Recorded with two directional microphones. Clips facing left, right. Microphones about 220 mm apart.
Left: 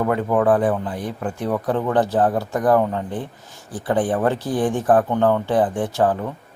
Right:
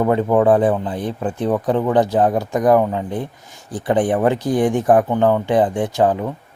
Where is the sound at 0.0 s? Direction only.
25° right (ahead or behind).